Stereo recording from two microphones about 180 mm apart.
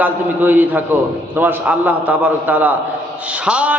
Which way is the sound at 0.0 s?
10° right (ahead or behind).